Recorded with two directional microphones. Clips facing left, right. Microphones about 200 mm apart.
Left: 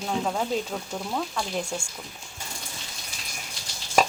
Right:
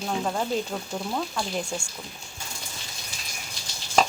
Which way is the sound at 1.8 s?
25° left (ahead or behind).